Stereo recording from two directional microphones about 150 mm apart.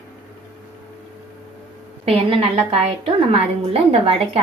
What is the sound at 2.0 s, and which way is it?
A woman's voice, 40° right (ahead or behind).